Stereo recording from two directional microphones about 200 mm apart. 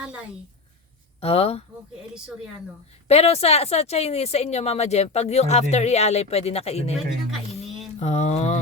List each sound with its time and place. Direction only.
0.0 s a woman's voice: 5° right (ahead or behind)
1.2 s speech: 30° left (ahead or behind)
3.1 s speech: 30° left (ahead or behind)
7.9 s speech: 35° left (ahead or behind)